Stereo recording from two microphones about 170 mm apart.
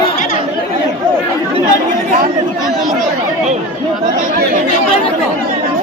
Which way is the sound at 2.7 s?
Centre (ahead or behind).